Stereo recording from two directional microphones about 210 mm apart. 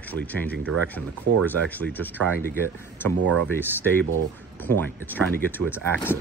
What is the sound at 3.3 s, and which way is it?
Speech, 10° left (ahead or behind).